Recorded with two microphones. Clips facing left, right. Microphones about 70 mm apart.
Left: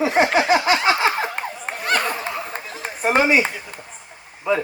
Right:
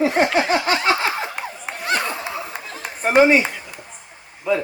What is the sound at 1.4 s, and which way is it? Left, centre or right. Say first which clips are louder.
Laughter: left 2 dB; left.